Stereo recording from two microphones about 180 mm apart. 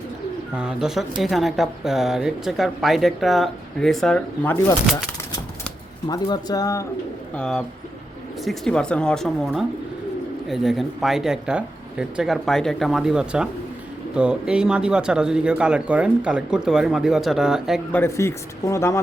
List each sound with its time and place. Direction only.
0.5 s speech: 5° right (ahead or behind)
6.1 s speech: 20° left (ahead or behind)
7.3 s speech: 5° left (ahead or behind)
10.5 s speech: centre (ahead or behind)
17.9 s a man's voice: 15° left (ahead or behind)